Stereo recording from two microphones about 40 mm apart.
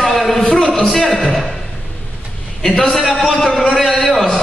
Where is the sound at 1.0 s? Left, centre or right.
Centre.